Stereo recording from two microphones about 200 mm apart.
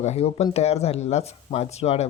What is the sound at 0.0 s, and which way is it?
Speech, 35° left (ahead or behind).